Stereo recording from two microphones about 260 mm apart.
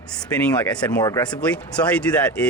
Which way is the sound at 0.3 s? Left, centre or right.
Centre.